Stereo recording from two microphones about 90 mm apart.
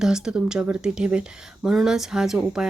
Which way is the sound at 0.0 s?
5° right (ahead or behind).